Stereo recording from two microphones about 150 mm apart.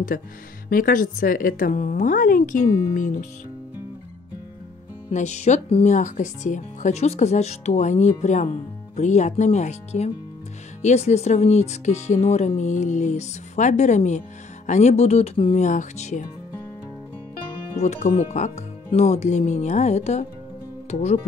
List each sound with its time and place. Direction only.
0.1 s a woman's voice: 70° left (ahead or behind)
5.1 s speech: 50° left (ahead or behind)
15.6 s speech: 55° left (ahead or behind)
17.8 s speech: 50° left (ahead or behind)